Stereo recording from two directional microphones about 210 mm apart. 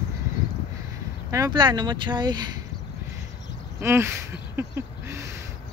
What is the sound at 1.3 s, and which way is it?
Speech, 20° right (ahead or behind).